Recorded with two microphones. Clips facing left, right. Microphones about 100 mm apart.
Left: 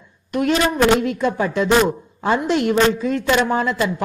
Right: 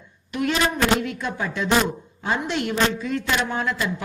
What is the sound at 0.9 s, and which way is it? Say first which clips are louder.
A man's voice: left 7 dB; 45° left (ahead or behind).